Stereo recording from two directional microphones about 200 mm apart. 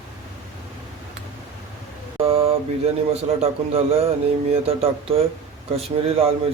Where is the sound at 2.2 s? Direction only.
25° right (ahead or behind).